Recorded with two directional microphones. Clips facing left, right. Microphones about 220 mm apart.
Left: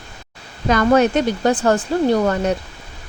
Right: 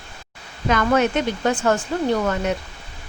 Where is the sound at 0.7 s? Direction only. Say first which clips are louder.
Left 4 dB; 35° left (ahead or behind).